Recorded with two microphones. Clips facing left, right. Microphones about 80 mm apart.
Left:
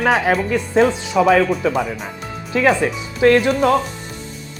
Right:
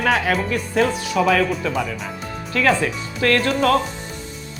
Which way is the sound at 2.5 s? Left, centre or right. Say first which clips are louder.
Left 3 dB; centre.